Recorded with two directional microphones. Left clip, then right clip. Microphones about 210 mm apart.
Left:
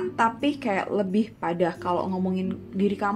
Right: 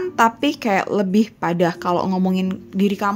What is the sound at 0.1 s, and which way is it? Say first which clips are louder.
Speech: right 8 dB; 45° right (ahead or behind).